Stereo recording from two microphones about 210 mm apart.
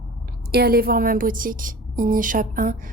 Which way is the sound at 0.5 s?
45° right (ahead or behind).